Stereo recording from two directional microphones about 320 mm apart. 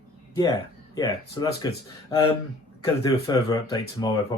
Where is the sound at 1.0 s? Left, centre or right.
Centre.